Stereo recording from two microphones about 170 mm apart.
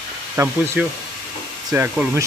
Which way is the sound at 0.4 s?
15° right (ahead or behind).